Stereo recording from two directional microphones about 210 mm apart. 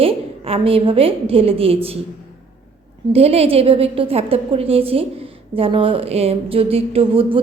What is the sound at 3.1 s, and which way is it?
A woman's voice, 30° right (ahead or behind).